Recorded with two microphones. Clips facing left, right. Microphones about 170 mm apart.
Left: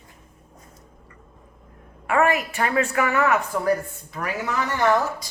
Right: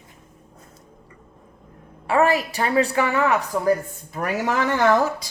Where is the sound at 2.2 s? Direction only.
35° right (ahead or behind).